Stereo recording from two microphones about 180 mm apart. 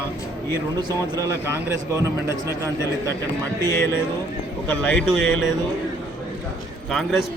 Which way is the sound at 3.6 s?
15° left (ahead or behind).